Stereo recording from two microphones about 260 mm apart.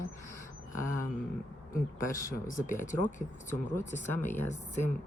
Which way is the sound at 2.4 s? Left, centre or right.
Left.